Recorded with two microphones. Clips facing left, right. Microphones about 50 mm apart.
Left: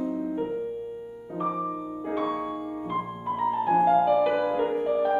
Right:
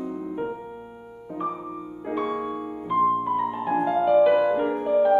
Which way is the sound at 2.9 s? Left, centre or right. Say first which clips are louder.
Right 10 dB; centre.